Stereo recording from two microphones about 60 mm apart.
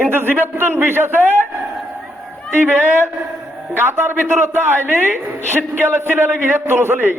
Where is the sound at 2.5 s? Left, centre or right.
Right.